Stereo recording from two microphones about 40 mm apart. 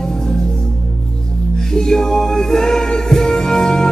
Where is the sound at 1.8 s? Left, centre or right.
Centre.